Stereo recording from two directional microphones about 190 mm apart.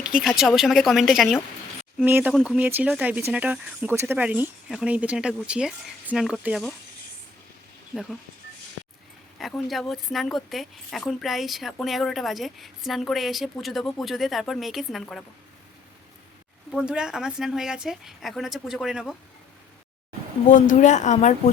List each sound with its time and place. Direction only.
0.2 s speech: centre (ahead or behind)
9.4 s speech: centre (ahead or behind)
16.7 s speech: 5° right (ahead or behind)
20.5 s speech: 40° left (ahead or behind)